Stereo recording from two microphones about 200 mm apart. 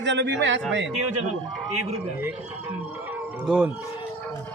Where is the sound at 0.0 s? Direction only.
60° right (ahead or behind).